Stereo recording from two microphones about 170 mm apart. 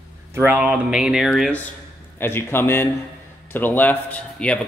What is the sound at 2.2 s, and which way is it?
Speech, 15° left (ahead or behind).